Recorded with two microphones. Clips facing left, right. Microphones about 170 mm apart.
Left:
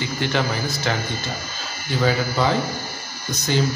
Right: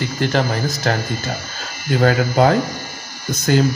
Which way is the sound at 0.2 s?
40° right (ahead or behind).